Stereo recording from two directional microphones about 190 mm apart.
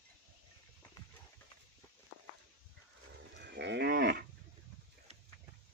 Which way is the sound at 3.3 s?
65° right (ahead or behind).